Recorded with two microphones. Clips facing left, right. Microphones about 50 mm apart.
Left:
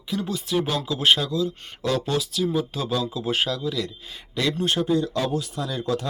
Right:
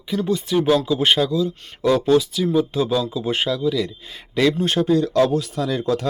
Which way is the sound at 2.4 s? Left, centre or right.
Right.